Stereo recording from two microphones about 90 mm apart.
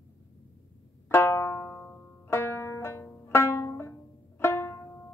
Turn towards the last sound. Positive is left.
turn(degrees=25)  # may be behind; listen again after turning